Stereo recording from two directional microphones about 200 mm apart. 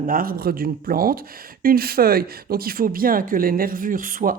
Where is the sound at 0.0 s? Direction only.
45° right (ahead or behind).